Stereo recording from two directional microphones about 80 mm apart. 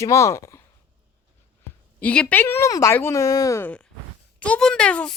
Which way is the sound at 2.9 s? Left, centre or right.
Left.